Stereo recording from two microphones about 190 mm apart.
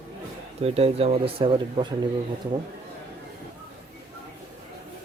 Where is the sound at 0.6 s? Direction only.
30° right (ahead or behind).